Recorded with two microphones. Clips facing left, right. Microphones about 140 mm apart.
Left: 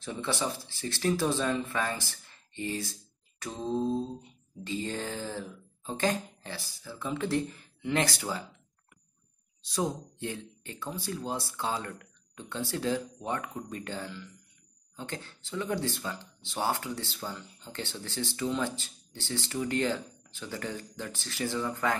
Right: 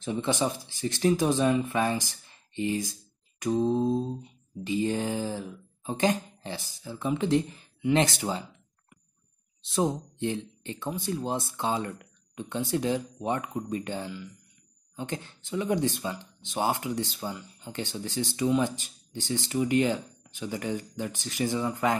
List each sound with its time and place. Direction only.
0.0 s speech: 20° right (ahead or behind)
9.6 s speech: 25° right (ahead or behind)